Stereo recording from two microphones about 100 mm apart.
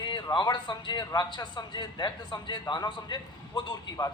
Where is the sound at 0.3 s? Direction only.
45° left (ahead or behind).